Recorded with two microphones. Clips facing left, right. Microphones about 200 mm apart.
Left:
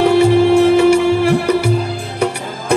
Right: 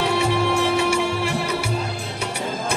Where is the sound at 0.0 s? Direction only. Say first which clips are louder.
Left 10 dB; 55° left (ahead or behind).